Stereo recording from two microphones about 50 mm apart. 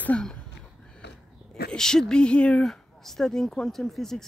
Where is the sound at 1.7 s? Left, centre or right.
Centre.